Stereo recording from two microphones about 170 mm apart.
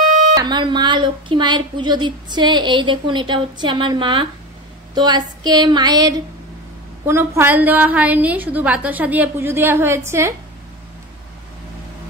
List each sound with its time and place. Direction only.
0.4 s a woman's voice: 25° right (ahead or behind)